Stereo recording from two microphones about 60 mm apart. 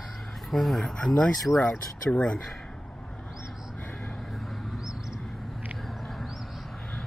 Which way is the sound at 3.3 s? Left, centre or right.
Centre.